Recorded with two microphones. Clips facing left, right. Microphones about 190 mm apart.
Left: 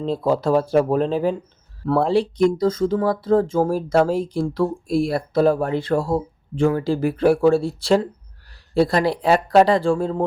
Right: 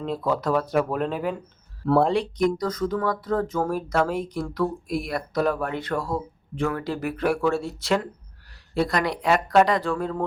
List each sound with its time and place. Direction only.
0.0 s speech: 30° left (ahead or behind)
1.8 s speech: centre (ahead or behind)
2.4 s speech: 25° left (ahead or behind)